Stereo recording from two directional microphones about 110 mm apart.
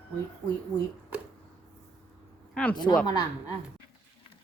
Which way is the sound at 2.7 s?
40° left (ahead or behind).